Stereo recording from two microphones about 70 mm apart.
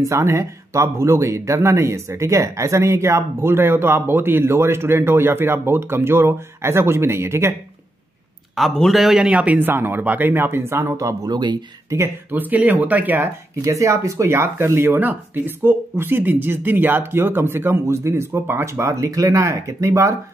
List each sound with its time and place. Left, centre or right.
0.0 s speech: right
8.5 s a man's voice: centre
9.2 s speech: centre; by 11.0 s right
11.0 s speech: right
11.3 s speech: right
12.3 s speech: right
13.7 s speech: right